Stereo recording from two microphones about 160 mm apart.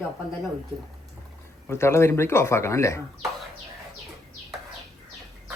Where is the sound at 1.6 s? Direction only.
15° left (ahead or behind).